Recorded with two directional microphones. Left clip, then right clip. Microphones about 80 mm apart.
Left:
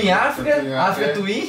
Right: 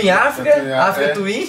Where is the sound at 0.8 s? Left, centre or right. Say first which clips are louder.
Right 4 dB; centre.